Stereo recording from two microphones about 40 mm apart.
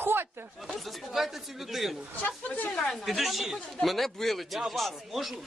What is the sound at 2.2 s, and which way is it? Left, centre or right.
Speech, left.